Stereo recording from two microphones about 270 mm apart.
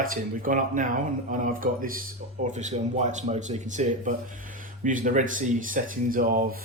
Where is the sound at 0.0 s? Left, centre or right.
Right.